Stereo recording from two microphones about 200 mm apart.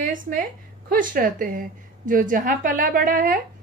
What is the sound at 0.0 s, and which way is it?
A woman's voice, 40° right (ahead or behind).